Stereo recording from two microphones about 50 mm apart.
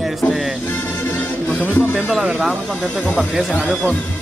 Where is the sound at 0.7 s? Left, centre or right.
Left.